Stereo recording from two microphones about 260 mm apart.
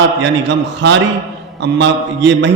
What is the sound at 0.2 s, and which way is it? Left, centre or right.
A man's voice, right.